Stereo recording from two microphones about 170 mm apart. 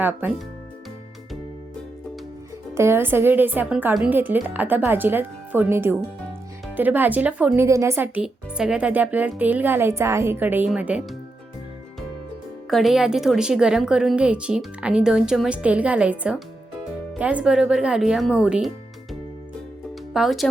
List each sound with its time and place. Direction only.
0.0 s speech: 10° right (ahead or behind)
2.7 s speech: 15° right (ahead or behind)
12.7 s a woman's voice: centre (ahead or behind)
20.1 s a woman's voice: centre (ahead or behind)